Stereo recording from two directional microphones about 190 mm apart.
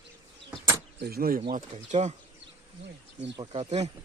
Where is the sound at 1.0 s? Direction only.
50° right (ahead or behind).